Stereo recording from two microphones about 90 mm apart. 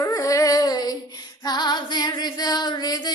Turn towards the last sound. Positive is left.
turn(degrees=50)  # may be behind; listen again after turning